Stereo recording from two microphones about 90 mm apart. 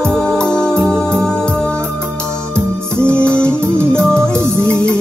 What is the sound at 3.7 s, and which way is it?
Music, 25° right (ahead or behind).